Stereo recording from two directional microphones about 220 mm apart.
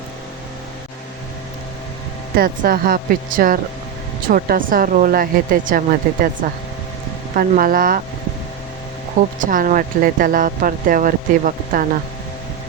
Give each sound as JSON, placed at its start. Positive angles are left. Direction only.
{"t": 2.3, "sound": "speech", "side_deg": -40}
{"t": 7.3, "sound": "speech", "side_deg": -40}
{"t": 9.2, "sound": "speech", "side_deg": -35}